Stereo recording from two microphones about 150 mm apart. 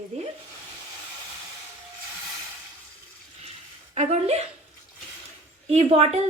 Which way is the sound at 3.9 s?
45° right (ahead or behind).